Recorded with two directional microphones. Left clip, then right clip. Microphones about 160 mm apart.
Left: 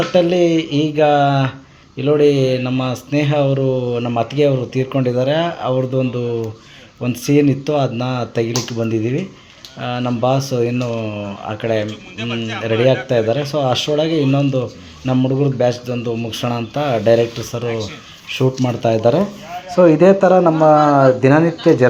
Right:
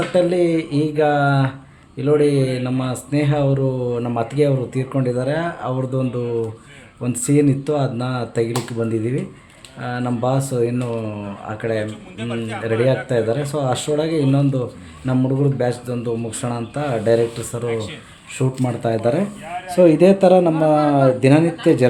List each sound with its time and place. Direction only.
0.1 s speech: 10° left (ahead or behind)
19.6 s a man's voice: 5° right (ahead or behind)